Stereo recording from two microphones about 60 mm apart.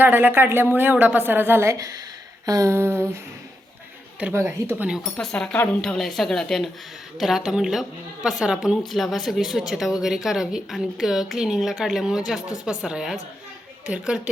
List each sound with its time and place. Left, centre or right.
0.0 s a woman's voice: right
2.5 s a sound: right
2.7 s a sound: right
4.2 s speech: right
5.2 s speech: centre
8.9 s speech: centre